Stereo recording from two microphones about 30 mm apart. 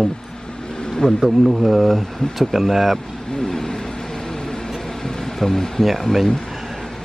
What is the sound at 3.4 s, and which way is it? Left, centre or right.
Vehicle, centre.